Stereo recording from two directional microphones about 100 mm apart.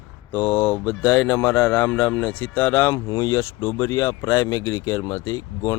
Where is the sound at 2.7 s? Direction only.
30° left (ahead or behind).